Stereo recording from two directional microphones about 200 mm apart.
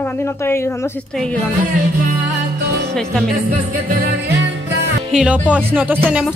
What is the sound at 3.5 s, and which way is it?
Music, 45° right (ahead or behind).